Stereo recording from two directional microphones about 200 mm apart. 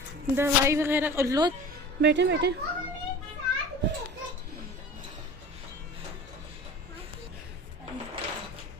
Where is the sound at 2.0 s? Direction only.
60° right (ahead or behind).